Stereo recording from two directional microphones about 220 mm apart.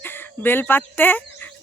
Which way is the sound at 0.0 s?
10° left (ahead or behind).